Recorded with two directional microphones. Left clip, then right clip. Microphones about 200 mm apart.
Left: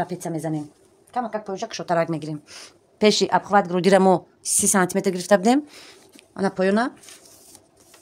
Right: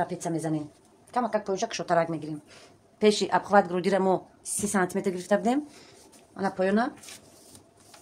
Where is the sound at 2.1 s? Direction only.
55° left (ahead or behind); by 3.8 s 35° left (ahead or behind).